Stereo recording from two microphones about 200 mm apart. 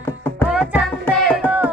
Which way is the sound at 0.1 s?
10° left (ahead or behind).